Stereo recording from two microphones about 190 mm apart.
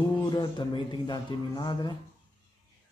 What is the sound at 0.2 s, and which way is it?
A man's voice, 20° left (ahead or behind).